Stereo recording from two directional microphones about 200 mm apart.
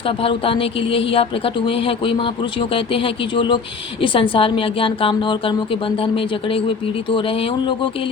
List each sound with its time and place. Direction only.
0.0 s a woman's voice: 25° left (ahead or behind)